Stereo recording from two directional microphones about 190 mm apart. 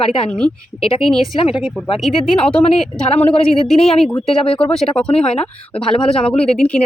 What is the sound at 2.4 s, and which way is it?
Speech, 30° left (ahead or behind).